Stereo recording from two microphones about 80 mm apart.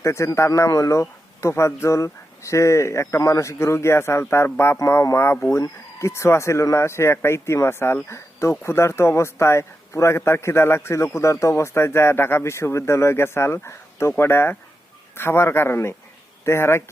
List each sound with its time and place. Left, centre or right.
0.0 s speech: left